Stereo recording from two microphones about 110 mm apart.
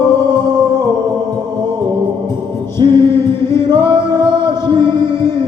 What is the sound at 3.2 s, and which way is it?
Chant, 45° right (ahead or behind).